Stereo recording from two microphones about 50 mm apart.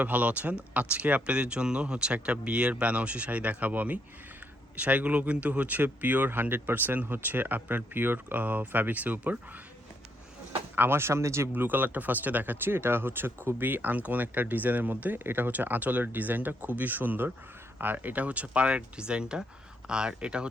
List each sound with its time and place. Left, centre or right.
0.0 s speech: right
10.8 s speech: right
11.5 s speech: right; by 20.5 s centre